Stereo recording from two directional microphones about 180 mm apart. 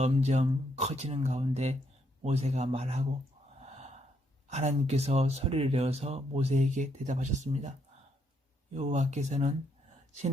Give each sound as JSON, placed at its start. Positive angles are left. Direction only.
{"t": 0.0, "sound": "speech", "side_deg": -40}
{"t": 3.6, "sound": "gasp", "side_deg": -40}
{"t": 4.4, "sound": "speech", "side_deg": -40}
{"t": 8.7, "sound": "speech", "side_deg": -40}